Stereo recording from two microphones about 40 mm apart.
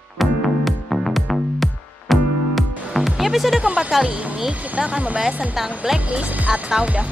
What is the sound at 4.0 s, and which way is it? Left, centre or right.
Speech, centre.